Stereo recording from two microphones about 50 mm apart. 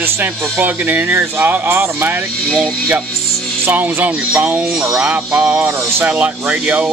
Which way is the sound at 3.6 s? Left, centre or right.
Right.